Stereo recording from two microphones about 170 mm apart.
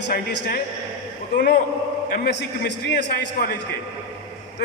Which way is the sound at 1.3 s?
80° left.